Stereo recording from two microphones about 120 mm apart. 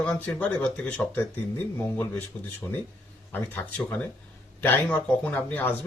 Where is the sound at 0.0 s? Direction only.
10° left (ahead or behind).